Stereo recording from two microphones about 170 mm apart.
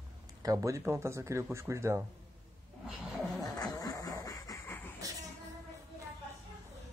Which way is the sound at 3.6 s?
20° left (ahead or behind).